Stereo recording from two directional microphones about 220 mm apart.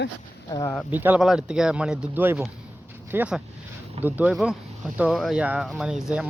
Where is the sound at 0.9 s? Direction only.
10° right (ahead or behind).